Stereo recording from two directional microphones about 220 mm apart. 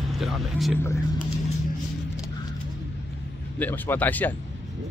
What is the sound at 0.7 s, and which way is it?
Speech, 10° left (ahead or behind).